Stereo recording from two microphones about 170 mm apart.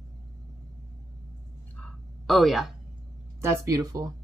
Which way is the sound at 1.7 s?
5° left (ahead or behind).